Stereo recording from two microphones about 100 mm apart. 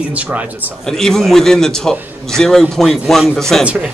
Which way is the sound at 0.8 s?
5° left (ahead or behind).